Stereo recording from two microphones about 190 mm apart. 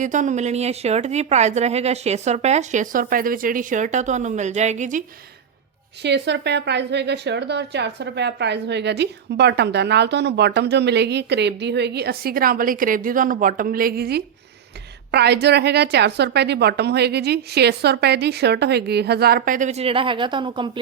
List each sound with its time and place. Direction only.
0.0 s a woman's voice: 40° right (ahead or behind)
6.0 s speech: 65° right (ahead or behind); by 20.7 s 25° right (ahead or behind)